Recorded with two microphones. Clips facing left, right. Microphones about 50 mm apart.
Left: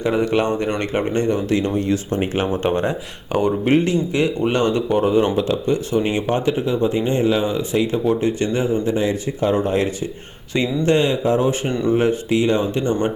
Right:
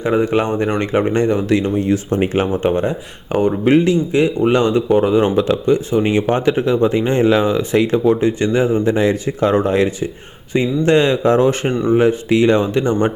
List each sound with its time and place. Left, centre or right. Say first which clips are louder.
0.0 s speech: right 2 dB; right
2.6 s speech: right 3 dB; centre
3.7 s speech: right 6 dB; right
6.1 s speech: right 4 dB; right
8.9 s speech: right 4 dB; right
12.3 s speech: right 5 dB; right